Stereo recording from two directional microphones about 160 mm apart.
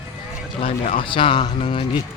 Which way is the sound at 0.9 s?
30° left (ahead or behind).